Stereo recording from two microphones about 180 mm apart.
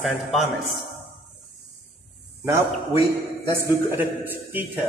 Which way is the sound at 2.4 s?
15° right (ahead or behind).